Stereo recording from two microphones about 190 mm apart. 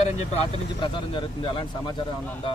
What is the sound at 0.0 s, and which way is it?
Speech, 35° left (ahead or behind).